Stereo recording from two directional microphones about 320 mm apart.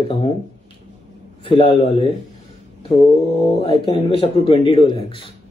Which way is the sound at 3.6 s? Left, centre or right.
Centre.